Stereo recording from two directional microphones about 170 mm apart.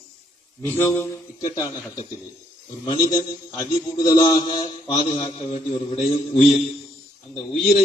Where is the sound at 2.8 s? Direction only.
30° left (ahead or behind).